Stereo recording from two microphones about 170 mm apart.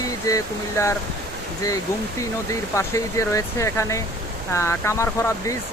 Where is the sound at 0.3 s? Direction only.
20° left (ahead or behind).